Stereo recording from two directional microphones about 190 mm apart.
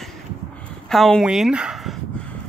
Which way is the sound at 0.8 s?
Centre (ahead or behind).